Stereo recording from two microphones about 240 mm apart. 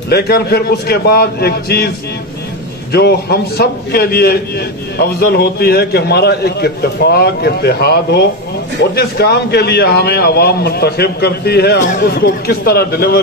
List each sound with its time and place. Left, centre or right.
0.1 s a man's voice: left
2.9 s a man's voice: left